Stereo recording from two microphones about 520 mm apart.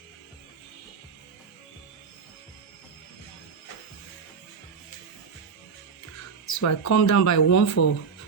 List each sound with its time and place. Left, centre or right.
6.5 s speech: left